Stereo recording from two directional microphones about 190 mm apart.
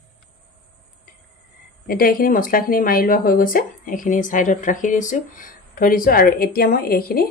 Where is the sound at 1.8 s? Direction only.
50° left (ahead or behind).